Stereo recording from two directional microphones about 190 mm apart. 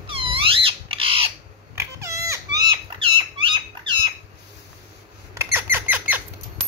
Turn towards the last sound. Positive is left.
turn(degrees=-10)  # may be behind; listen again after turning